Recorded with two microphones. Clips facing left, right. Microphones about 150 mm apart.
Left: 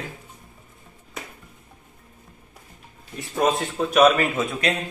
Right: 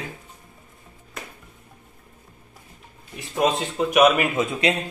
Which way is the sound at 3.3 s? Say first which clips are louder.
Even; 15° right (ahead or behind).